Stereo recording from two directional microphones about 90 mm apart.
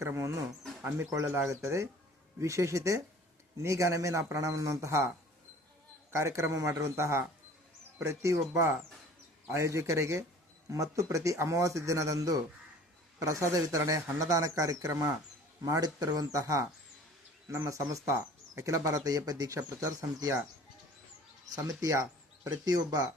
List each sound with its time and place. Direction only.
0.0 s a man's voice: 30° right (ahead or behind)
21.5 s speech: 40° right (ahead or behind)